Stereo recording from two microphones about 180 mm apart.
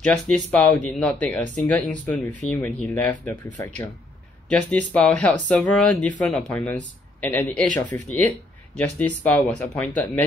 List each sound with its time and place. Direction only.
0.0 s speech: 5° left (ahead or behind)
7.6 s speech: 45° right (ahead or behind)
8.7 s speech: 10° left (ahead or behind)